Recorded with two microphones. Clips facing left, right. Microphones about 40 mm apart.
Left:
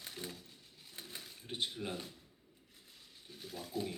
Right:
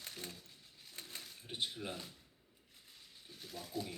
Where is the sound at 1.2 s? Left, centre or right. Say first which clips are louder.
Left 2 dB; centre.